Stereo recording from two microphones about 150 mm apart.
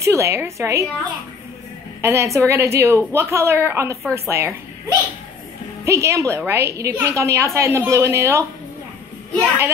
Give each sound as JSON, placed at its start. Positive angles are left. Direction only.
{"t": 0.0, "sound": "a woman's voice", "side_deg": -20}
{"t": 2.0, "sound": "a woman's voice", "side_deg": -20}